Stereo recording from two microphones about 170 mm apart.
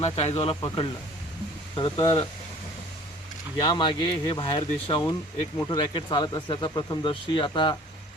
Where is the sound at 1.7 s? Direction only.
25° left (ahead or behind).